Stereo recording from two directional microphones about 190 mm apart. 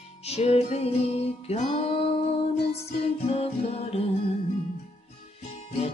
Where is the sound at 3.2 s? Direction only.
35° left (ahead or behind).